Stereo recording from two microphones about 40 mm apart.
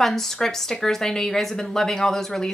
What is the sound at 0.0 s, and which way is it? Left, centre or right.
Speech, centre.